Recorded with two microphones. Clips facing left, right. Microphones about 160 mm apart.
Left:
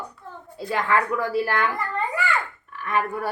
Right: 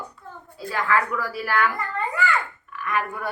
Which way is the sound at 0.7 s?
25° left (ahead or behind).